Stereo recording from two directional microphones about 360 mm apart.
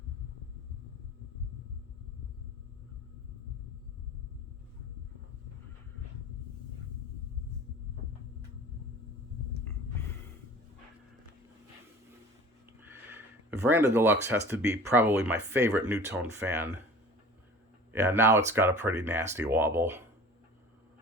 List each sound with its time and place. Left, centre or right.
12.8 s speech: centre
18.0 s speech: centre